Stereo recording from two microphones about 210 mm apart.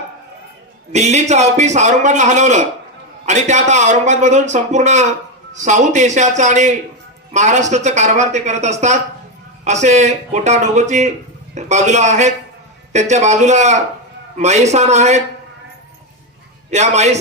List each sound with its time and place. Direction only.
0.9 s a man's voice: 30° right (ahead or behind)
16.7 s a man's voice: 30° right (ahead or behind)